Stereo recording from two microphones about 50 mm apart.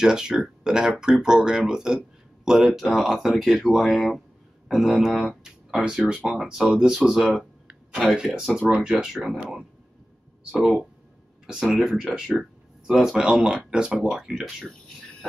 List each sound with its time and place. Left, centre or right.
0.0 s speech: centre
10.5 s speech: centre
12.2 s a sound: centre
13.2 s speech: centre